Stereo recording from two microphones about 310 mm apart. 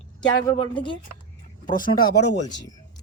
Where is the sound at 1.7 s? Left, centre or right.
Left.